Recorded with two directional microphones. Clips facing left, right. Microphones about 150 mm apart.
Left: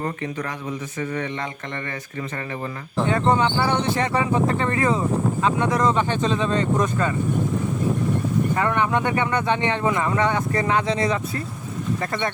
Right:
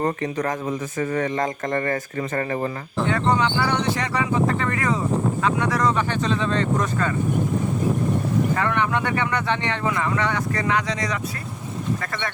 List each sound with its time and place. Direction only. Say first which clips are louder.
0.0 s speech: right 4 dB; 40° right (ahead or behind)
3.1 s speech: left 1 dB; 25° left (ahead or behind)
8.5 s speech: left 1 dB; 20° left (ahead or behind)